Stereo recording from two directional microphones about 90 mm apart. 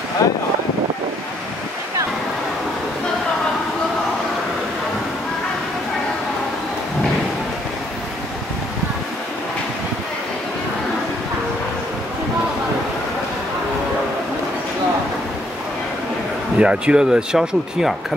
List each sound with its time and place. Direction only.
0.2 s speech: 35° left (ahead or behind)
16.5 s speech: 10° right (ahead or behind)